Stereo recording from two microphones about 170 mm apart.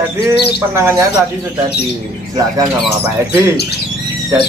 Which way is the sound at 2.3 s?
20° right (ahead or behind).